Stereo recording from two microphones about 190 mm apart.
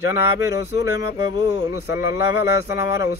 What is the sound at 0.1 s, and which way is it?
Mantra, 15° right (ahead or behind).